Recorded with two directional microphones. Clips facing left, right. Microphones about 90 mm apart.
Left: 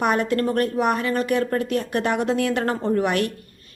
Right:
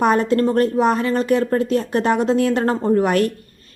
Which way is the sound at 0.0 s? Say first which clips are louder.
Right 5 dB; 35° right (ahead or behind).